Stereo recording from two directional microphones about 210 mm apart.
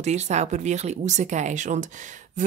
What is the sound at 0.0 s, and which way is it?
Speech, 35° right (ahead or behind).